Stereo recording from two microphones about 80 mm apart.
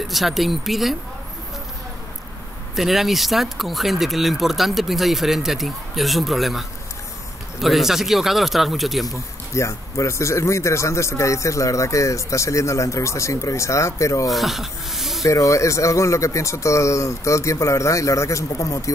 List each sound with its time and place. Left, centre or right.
0.0 s speech: centre
2.7 s speech: centre
7.6 s speech: centre
9.5 s speech: left
14.2 s speech: centre
15.2 s speech: left